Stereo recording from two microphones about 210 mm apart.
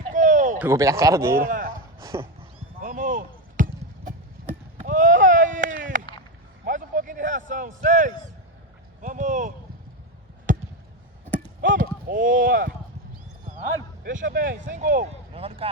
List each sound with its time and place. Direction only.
0.1 s a sound: 35° right (ahead or behind)
0.6 s speech: 15° right (ahead or behind)
1.4 s a sound: 40° right (ahead or behind)
2.0 s speech: 15° right (ahead or behind)
2.8 s basketball bounce: 40° right (ahead or behind)
4.8 s run: 40° right (ahead or behind)
6.7 s a sound: 40° right (ahead or behind)
10.5 s basketball bounce: 35° right (ahead or behind)
11.6 s run: 40° right (ahead or behind)
14.0 s speech: 40° right (ahead or behind)